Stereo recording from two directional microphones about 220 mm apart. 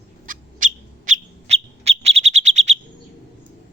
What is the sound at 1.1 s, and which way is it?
Bird, 30° right (ahead or behind).